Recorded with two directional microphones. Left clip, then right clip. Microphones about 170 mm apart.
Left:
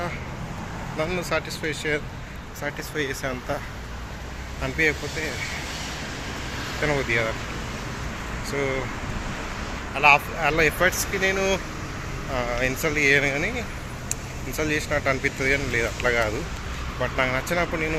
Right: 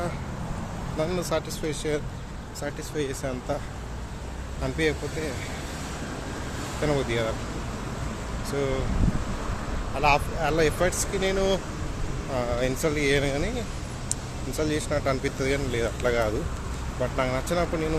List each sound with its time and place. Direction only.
0.9 s speech: 15° right (ahead or behind)
4.6 s speech: 20° right (ahead or behind)
6.8 s speech: 15° right (ahead or behind)
10.0 s speech: 10° right (ahead or behind)
14.5 s speech: 15° right (ahead or behind)